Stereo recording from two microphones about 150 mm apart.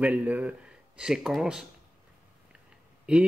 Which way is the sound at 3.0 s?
5° right (ahead or behind).